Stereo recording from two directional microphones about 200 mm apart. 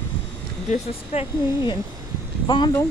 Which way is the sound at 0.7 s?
30° left (ahead or behind).